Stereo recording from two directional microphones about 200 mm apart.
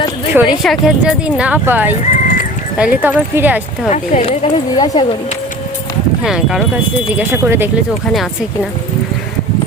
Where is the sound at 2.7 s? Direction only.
5° right (ahead or behind).